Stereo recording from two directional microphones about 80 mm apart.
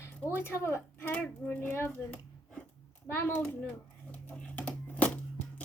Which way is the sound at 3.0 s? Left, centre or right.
Left.